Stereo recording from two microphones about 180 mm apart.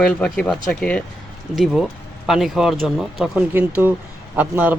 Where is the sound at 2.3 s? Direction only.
Centre (ahead or behind).